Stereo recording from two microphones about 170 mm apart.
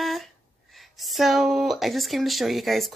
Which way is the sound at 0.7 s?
Centre (ahead or behind).